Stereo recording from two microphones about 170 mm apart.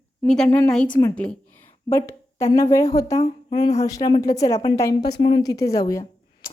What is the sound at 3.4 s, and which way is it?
A woman's voice, 30° left (ahead or behind).